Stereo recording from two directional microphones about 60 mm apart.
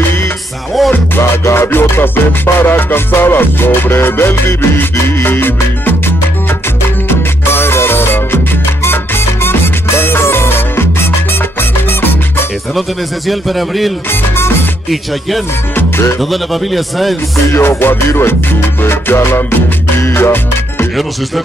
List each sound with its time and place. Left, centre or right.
0.9 s music: left
7.5 s music: left
13.3 s speech: centre
15.7 s music: left
16.2 s speech: centre
17.5 s music: left